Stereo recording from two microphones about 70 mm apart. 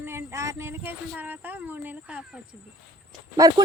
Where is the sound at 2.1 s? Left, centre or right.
Centre.